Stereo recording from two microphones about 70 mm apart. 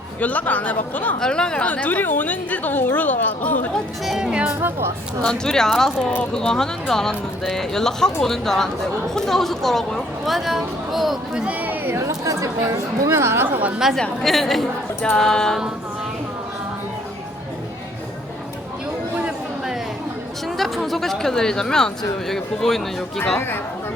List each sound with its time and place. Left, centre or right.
0.2 s a woman's voice: left
1.2 s a woman's voice: centre
4.2 s speech: centre
5.2 s speech: centre
11.3 s a sound: centre
11.9 s speech: right
13.9 s speech: centre
20.6 s speech: centre